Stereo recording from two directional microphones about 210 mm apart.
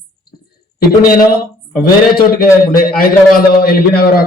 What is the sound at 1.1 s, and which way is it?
A man's voice, 45° left (ahead or behind).